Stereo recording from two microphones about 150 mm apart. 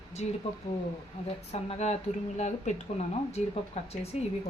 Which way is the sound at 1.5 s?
45° left (ahead or behind).